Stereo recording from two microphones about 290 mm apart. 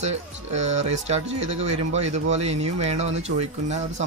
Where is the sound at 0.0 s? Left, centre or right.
Right.